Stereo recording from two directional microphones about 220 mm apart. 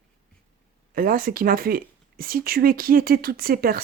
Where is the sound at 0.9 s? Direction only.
40° right (ahead or behind).